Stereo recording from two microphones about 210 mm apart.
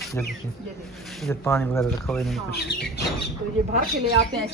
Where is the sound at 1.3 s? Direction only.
10° left (ahead or behind).